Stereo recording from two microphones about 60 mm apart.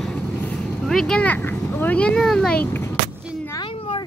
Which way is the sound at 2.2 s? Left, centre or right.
Centre.